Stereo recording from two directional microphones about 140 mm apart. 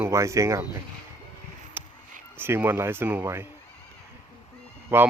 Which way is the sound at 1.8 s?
15° right (ahead or behind).